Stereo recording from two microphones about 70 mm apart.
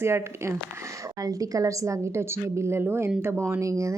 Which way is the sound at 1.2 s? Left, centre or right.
Right.